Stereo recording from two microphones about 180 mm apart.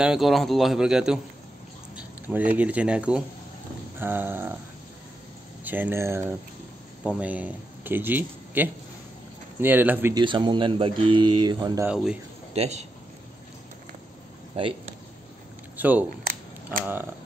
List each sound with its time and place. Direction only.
0.0 s a man's voice: 5° right (ahead or behind)
5.6 s speech: 10° right (ahead or behind)
10.1 s speech: 25° right (ahead or behind)
11.8 s a man's voice: 5° right (ahead or behind)
12.5 s a man's voice: 35° right (ahead or behind)
14.5 s speech: 30° right (ahead or behind)
15.8 s speech: 10° right (ahead or behind)